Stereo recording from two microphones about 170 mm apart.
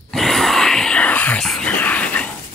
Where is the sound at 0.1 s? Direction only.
Centre (ahead or behind).